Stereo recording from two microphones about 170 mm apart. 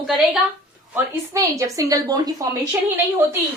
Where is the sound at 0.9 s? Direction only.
20° right (ahead or behind).